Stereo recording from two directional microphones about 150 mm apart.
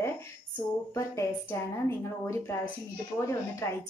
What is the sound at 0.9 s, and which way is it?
A woman's voice, 15° left (ahead or behind).